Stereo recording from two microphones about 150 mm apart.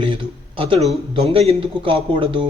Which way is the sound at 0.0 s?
35° right (ahead or behind).